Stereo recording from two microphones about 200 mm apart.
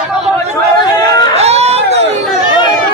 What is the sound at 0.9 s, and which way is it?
Chatter, 20° left (ahead or behind).